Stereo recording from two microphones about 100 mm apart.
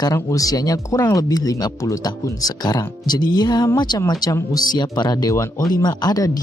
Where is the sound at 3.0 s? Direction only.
45° left (ahead or behind).